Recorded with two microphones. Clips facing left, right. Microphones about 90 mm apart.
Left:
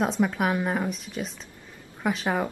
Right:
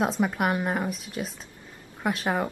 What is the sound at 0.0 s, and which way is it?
Speech, 5° right (ahead or behind).